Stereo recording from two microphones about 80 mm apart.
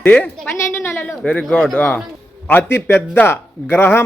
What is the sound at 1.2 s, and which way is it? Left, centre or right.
Speech, centre.